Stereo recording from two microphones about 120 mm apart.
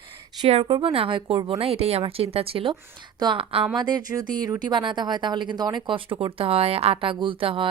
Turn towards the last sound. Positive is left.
turn(degrees=-45)  # may be behind; listen again after turning